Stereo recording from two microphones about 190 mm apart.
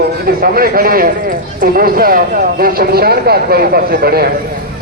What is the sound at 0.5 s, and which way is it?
A man's voice, 50° right (ahead or behind).